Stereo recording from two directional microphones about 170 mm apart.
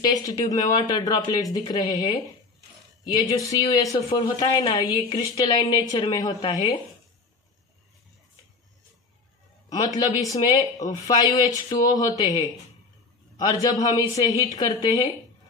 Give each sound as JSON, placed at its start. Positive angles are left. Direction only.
{"t": 0.0, "sound": "a woman's voice", "side_deg": 20}
{"t": 3.2, "sound": "a woman's voice", "side_deg": 20}
{"t": 9.7, "sound": "a woman's voice", "side_deg": 20}